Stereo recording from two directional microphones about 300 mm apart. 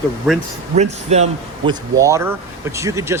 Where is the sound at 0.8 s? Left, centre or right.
Right.